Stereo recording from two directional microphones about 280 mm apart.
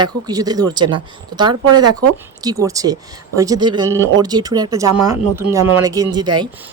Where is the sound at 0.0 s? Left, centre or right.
Centre.